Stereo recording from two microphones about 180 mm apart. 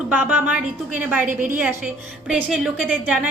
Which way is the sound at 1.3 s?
50° right (ahead or behind).